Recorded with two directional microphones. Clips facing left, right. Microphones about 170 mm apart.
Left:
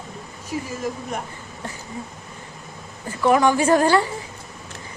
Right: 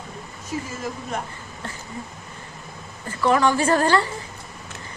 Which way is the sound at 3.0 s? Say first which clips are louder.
Left 2 dB; 15° left (ahead or behind).